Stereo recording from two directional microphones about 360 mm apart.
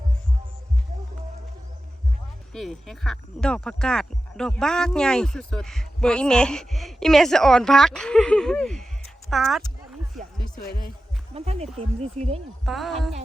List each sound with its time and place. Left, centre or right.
2.5 s speech: centre
10.5 s speech: left
11.3 s speech: centre
12.6 s speech: centre